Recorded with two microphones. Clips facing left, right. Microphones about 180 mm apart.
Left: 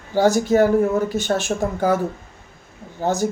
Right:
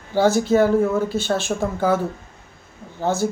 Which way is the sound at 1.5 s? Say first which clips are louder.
Left 1 dB; 40° left (ahead or behind).